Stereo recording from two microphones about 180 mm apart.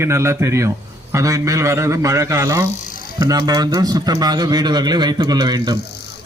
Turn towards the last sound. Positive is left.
turn(degrees=-25)  # may be behind; listen again after turning